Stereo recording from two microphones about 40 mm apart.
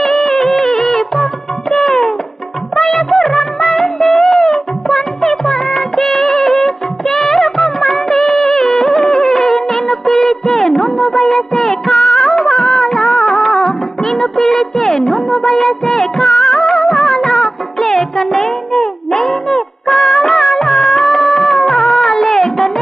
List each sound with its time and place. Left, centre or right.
0.0 s music: centre
5.5 s music of bollywood: centre